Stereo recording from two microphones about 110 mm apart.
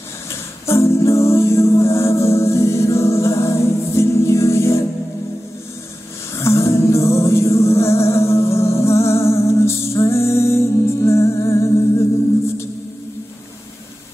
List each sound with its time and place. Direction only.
0.3 s music: 25° left (ahead or behind)
6.3 s music: 25° left (ahead or behind)